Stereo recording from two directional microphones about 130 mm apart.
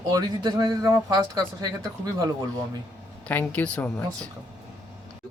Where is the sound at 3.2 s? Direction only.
10° left (ahead or behind).